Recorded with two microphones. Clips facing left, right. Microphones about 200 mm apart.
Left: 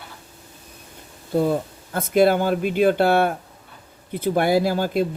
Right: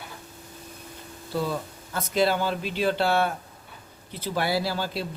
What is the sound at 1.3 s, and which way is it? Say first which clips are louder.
A man's voice: left 8 dB; 50° left (ahead or behind).